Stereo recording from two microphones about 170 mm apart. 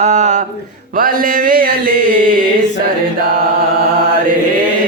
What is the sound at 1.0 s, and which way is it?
Mantra, 55° right (ahead or behind).